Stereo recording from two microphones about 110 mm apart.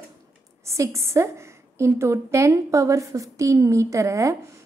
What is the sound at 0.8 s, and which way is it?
A woman's voice, 25° right (ahead or behind).